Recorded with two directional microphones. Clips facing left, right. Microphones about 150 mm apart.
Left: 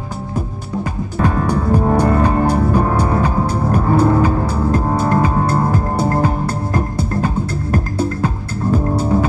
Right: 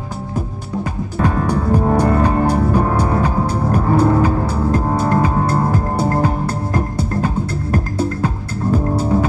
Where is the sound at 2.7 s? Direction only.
5° right (ahead or behind).